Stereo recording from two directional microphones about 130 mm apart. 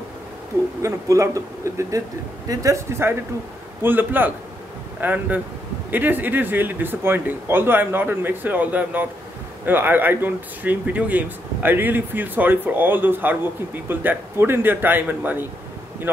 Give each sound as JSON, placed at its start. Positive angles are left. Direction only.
{"t": 0.8, "sound": "a man's voice", "side_deg": -25}